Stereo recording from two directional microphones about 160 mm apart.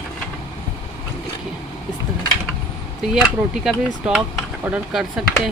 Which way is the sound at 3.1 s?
Centre (ahead or behind).